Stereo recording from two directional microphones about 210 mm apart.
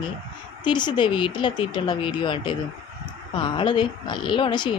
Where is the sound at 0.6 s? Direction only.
20° left (ahead or behind).